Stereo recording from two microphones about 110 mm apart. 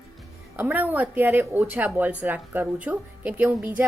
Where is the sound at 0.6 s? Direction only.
15° right (ahead or behind).